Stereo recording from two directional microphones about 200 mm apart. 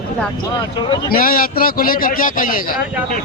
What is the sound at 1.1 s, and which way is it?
A man's voice, 45° left (ahead or behind).